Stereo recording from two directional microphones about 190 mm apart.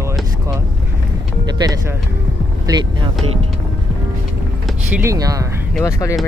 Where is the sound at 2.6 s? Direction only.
25° right (ahead or behind).